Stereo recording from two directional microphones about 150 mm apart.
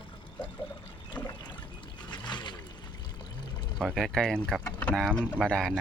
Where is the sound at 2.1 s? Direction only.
30° left (ahead or behind).